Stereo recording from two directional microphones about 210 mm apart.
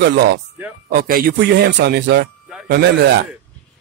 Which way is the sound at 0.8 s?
40° right (ahead or behind).